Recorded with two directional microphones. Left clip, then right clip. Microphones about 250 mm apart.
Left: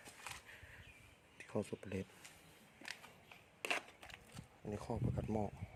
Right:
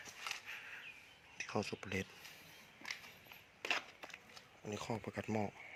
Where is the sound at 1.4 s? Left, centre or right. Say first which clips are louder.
Right 3 dB; centre.